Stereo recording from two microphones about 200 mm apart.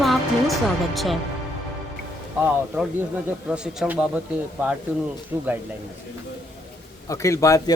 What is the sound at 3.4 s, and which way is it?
Speech, 5° right (ahead or behind).